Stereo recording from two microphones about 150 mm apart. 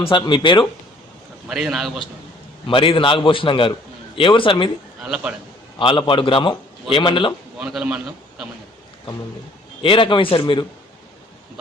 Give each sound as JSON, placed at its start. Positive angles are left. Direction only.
{"t": 0.0, "sound": "a man's voice", "side_deg": 35}
{"t": 1.5, "sound": "a man's voice", "side_deg": -5}
{"t": 2.6, "sound": "a man's voice", "side_deg": 35}
{"t": 5.0, "sound": "a man's voice", "side_deg": -5}
{"t": 5.8, "sound": "a man's voice", "side_deg": 35}
{"t": 7.6, "sound": "a man's voice", "side_deg": -5}
{"t": 9.8, "sound": "a man's voice", "side_deg": 35}